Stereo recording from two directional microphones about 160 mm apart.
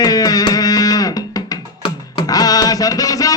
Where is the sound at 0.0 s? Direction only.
25° left (ahead or behind).